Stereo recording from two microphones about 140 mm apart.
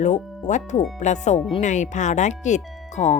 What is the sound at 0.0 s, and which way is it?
Speech, 55° left (ahead or behind).